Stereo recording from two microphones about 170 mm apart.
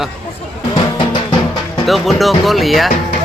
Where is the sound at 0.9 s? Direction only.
25° left (ahead or behind).